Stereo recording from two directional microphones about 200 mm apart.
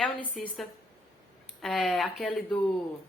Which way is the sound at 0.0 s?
5° left (ahead or behind).